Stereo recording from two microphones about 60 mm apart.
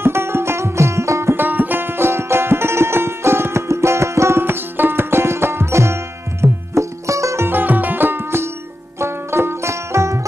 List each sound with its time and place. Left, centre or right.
0.0 s music: right
1.3 s music: right
7.4 s music: right
9.0 s banjo: right